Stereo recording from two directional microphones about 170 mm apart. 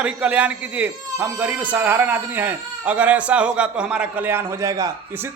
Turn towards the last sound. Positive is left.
turn(degrees=-15)  # may be behind; listen again after turning